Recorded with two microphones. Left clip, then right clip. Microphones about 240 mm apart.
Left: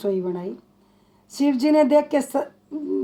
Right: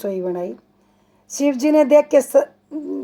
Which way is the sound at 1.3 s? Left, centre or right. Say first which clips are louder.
Right 3 dB; right.